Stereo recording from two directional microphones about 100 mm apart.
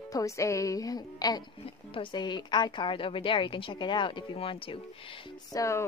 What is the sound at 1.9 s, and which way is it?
A woman's voice, 55° left (ahead or behind).